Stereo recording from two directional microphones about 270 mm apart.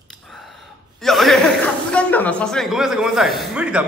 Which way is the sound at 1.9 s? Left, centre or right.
Centre.